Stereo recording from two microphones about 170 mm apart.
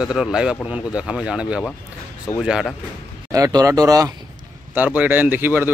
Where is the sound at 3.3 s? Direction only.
20° right (ahead or behind).